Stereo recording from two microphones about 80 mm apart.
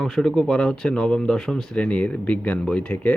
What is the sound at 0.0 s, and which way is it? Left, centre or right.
Speech, centre.